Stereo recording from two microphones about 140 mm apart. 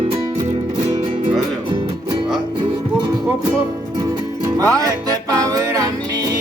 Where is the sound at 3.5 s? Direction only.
20° right (ahead or behind).